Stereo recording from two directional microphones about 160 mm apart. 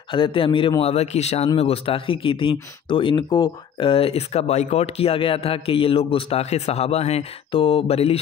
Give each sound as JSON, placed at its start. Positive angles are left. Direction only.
{"t": 0.1, "sound": "speech", "side_deg": 35}